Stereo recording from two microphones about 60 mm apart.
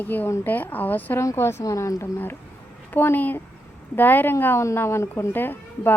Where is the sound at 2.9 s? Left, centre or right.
Left.